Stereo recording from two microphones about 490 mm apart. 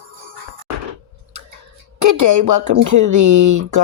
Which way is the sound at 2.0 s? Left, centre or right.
Right.